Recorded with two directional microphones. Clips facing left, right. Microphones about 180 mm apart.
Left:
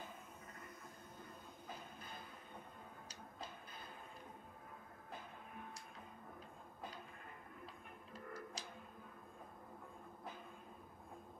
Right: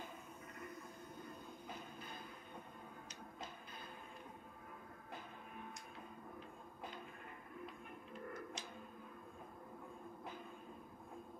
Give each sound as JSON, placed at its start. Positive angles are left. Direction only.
{"t": 7.6, "sound": "music", "side_deg": 35}